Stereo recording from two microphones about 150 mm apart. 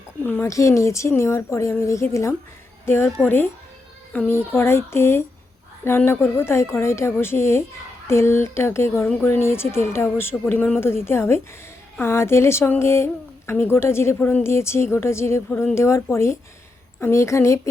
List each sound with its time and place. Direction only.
0.3 s a woman's voice: 15° left (ahead or behind)